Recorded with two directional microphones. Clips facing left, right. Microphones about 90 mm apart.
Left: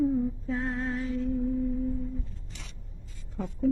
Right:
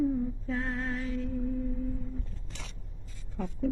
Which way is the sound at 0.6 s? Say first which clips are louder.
Left 1 dB; 5° left (ahead or behind).